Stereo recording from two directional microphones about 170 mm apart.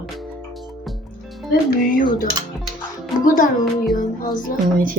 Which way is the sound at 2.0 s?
55° left (ahead or behind).